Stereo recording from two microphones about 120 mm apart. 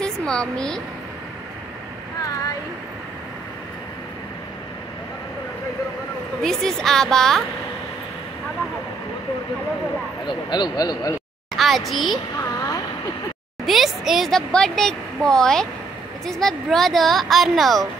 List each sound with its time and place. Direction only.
0.0 s speech: 5° left (ahead or behind)
6.4 s a woman's voice: 5° left (ahead or behind)
10.2 s a man's voice: 40° left (ahead or behind)
11.5 s a woman's voice: centre (ahead or behind)
13.7 s a woman's voice: centre (ahead or behind)